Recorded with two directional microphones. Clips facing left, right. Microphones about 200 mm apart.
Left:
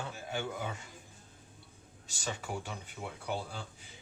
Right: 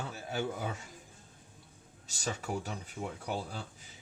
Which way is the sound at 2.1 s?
40° right (ahead or behind).